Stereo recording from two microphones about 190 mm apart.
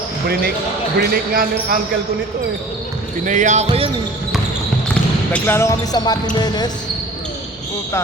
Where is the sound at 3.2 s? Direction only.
40° right (ahead or behind).